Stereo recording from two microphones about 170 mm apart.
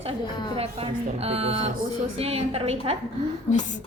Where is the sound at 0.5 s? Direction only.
35° right (ahead or behind).